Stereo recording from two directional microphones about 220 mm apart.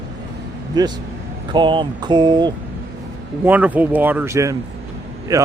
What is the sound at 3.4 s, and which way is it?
Speech, 5° right (ahead or behind).